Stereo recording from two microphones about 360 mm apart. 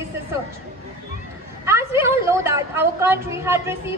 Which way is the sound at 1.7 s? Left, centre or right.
Centre.